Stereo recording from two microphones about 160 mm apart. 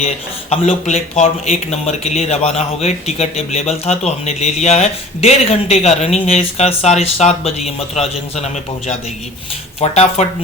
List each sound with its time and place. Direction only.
0.5 s speech: 45° left (ahead or behind)
9.8 s speech: 40° left (ahead or behind)